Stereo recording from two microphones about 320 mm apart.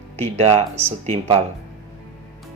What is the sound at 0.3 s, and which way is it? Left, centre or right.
Speech, centre.